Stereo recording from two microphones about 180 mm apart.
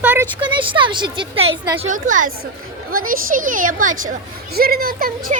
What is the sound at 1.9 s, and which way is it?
A woman's voice, 45° right (ahead or behind).